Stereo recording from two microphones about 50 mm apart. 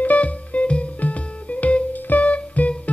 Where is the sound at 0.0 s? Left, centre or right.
Left.